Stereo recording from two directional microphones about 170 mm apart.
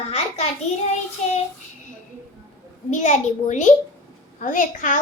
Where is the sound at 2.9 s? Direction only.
45° left (ahead or behind).